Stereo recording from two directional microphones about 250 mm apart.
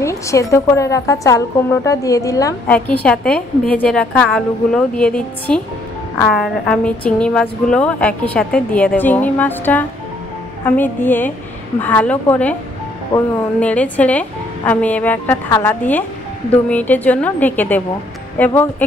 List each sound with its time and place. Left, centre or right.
0.0 s a woman's voice: centre